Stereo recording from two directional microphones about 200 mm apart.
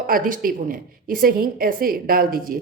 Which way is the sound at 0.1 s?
45° right (ahead or behind).